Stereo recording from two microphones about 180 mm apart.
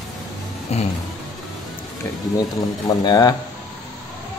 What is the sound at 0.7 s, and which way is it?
Vehicle, 35° left (ahead or behind).